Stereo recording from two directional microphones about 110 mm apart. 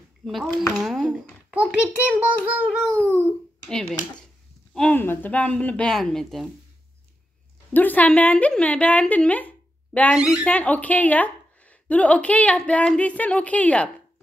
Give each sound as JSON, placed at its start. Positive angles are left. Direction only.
{"t": 0.2, "sound": "speech", "side_deg": 0}
{"t": 1.5, "sound": "a child's voice", "side_deg": -15}
{"t": 2.8, "sound": "a woman's voice", "side_deg": 10}
{"t": 4.9, "sound": "a woman's voice", "side_deg": 20}
{"t": 7.7, "sound": "a woman's voice", "side_deg": 15}
{"t": 10.1, "sound": "speech", "side_deg": -5}
{"t": 10.4, "sound": "a woman's voice", "side_deg": 15}